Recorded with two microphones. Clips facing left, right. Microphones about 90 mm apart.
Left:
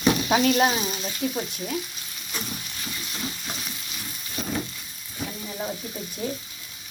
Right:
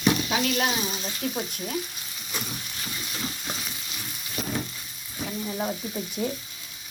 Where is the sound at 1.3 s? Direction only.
Centre (ahead or behind).